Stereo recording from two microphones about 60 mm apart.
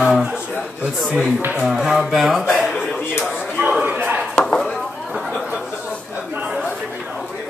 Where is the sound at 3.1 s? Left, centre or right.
Left.